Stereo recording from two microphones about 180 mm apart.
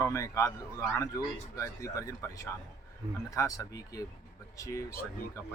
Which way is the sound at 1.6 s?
15° left (ahead or behind).